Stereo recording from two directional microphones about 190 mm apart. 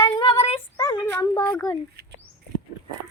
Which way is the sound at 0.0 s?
25° left (ahead or behind).